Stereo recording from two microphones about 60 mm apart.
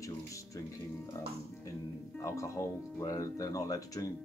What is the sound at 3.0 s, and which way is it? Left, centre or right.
Speech, left.